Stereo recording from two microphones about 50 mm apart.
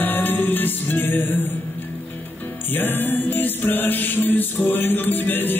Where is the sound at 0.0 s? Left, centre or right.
Left.